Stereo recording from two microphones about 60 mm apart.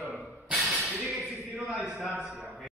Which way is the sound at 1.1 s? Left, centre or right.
Centre.